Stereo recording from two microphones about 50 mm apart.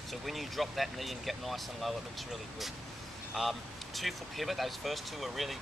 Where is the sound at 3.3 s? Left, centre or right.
Centre.